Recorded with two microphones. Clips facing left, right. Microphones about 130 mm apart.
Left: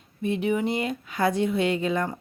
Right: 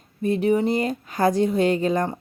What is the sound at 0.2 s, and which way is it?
Speech, 40° right (ahead or behind).